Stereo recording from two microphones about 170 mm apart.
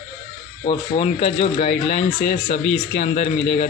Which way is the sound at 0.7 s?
35° left (ahead or behind).